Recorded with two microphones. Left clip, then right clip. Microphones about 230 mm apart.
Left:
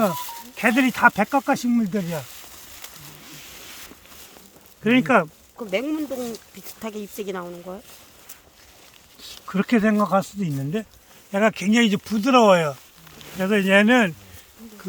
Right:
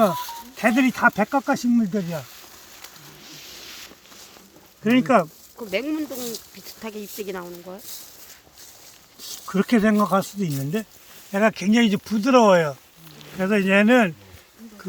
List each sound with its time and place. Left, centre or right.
0.1 s speech: left
0.5 s snake: centre; by 3.9 s left
4.8 s speech: centre
5.5 s speech: left
9.5 s speech: centre